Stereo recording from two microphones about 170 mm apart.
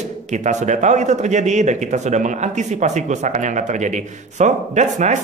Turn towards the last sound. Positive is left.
turn(degrees=-45)  # may be behind; listen again after turning